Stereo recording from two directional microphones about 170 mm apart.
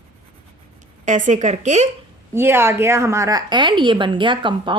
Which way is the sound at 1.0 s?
45° right (ahead or behind).